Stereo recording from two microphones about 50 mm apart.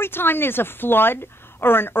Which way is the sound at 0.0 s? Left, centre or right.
Left.